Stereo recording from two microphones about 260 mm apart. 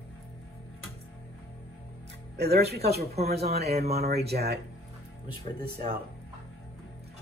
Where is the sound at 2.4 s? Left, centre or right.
Right.